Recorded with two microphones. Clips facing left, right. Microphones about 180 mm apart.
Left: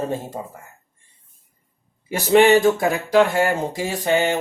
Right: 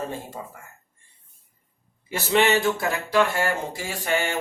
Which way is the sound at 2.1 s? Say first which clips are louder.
Left 7 dB; 45° left (ahead or behind).